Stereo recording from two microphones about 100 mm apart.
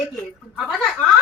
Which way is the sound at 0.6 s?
10° left (ahead or behind).